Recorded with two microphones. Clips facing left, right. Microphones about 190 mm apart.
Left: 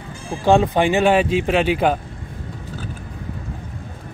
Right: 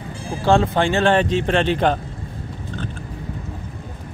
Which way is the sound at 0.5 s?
15° left (ahead or behind).